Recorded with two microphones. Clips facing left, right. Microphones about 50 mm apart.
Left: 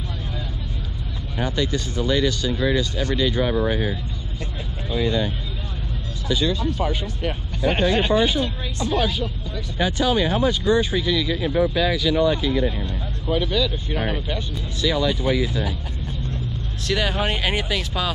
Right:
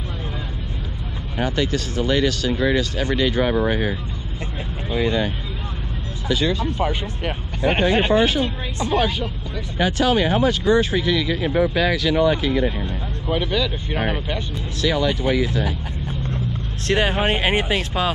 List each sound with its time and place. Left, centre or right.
1.4 s speech: right
4.9 s speech: right
6.5 s speech: right
9.8 s speech: right
13.3 s speech: centre
13.9 s speech: right
16.8 s speech: right